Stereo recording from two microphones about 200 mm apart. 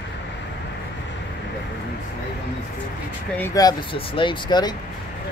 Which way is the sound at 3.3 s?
15° left (ahead or behind).